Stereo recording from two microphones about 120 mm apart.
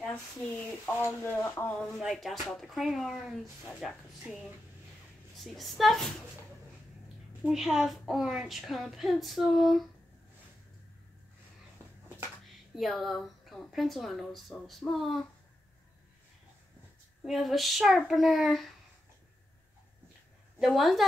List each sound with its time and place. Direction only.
0.0 s speech: 10° left (ahead or behind)
1.7 s a woman's voice: 5° left (ahead or behind)
5.4 s a woman's voice: centre (ahead or behind)
7.4 s a woman's voice: 5° right (ahead or behind)
12.4 s a woman's voice: centre (ahead or behind)
17.2 s a woman's voice: centre (ahead or behind)
20.5 s a woman's voice: 5° right (ahead or behind)